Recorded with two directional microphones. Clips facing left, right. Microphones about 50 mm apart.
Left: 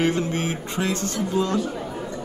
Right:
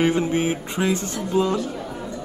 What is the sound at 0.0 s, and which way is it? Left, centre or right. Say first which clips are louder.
Speech: right 3 dB; centre.